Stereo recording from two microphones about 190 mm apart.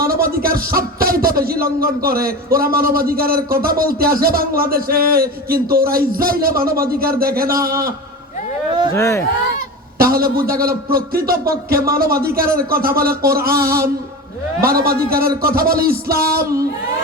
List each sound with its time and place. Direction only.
0.0 s a man's voice: 50° right (ahead or behind)
7.7 s a man's voice: 15° right (ahead or behind)
9.0 s speech: 15° left (ahead or behind)
10.0 s a man's voice: 50° right (ahead or behind)
16.4 s a man's voice: 15° right (ahead or behind)